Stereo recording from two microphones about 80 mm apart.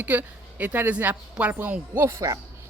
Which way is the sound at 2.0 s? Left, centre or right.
Right.